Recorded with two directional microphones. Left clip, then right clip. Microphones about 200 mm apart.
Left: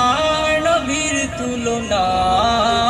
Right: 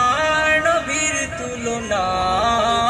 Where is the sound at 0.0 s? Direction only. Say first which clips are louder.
Left 1 dB; 15° right (ahead or behind).